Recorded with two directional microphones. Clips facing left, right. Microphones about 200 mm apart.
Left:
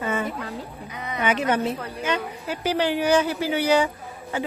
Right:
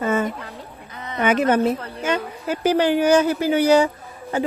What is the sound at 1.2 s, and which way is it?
A woman's voice, 50° right (ahead or behind).